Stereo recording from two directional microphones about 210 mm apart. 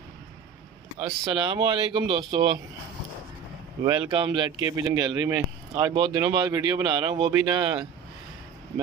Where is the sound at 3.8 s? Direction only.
25° right (ahead or behind).